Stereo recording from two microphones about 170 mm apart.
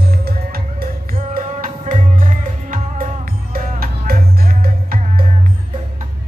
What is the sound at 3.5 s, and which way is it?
Music, 60° right (ahead or behind).